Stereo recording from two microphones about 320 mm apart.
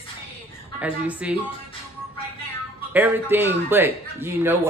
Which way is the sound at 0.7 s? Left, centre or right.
Centre.